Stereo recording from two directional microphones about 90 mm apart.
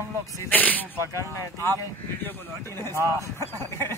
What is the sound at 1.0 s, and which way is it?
Speech, 35° left (ahead or behind).